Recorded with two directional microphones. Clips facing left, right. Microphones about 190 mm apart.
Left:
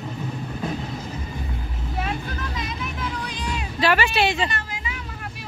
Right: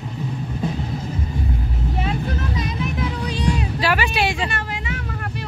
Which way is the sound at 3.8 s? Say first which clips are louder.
Left 2 dB; 10° right (ahead or behind).